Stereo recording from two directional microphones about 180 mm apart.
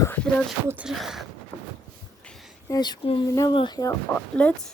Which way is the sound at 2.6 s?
20° left (ahead or behind).